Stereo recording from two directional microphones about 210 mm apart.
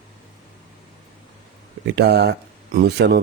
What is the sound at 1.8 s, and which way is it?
Speech, 55° right (ahead or behind).